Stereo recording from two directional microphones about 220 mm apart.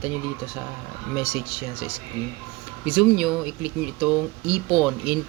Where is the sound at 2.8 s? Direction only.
5° right (ahead or behind).